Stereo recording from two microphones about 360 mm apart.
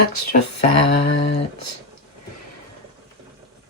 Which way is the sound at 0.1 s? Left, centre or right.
Left.